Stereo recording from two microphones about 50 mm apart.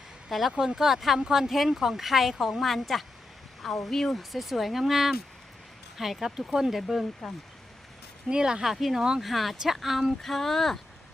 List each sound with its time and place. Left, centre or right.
0.3 s speech: centre
8.3 s speech: centre
8.6 s speech: centre
9.2 s speech: centre